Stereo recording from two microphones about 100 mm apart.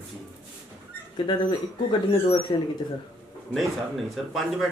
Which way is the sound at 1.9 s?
50° left (ahead or behind).